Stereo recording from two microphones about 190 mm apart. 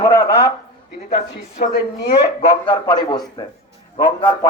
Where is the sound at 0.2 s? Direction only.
55° left (ahead or behind).